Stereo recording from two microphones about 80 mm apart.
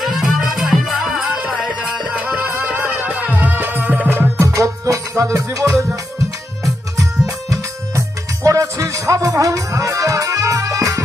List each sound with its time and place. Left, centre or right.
0.0 s music: centre
1.4 s music: centre
4.4 s music: right
7.3 s music: right